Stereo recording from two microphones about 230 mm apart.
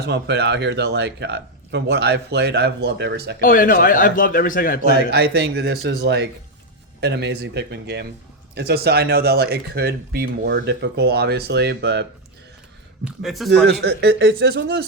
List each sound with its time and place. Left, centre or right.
0.0 s speech: right
3.4 s a man's voice: left
5.1 s speech: right
13.1 s a man's voice: centre
13.7 s speech: right